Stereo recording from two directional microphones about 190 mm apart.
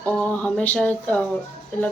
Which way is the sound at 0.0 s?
5° left (ahead or behind).